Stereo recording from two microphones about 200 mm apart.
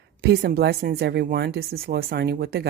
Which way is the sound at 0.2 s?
55° right (ahead or behind).